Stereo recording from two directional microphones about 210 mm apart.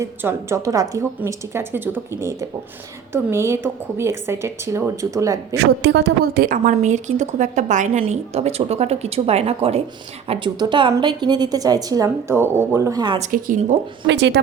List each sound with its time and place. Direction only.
0.0 s a woman's voice: 10° right (ahead or behind)
3.1 s a woman's voice: 10° right (ahead or behind)
5.5 s a woman's voice: 55° right (ahead or behind); by 13.1 s 20° right (ahead or behind)
13.1 s a woman's voice: 35° right (ahead or behind)
14.1 s a woman's voice: 55° right (ahead or behind)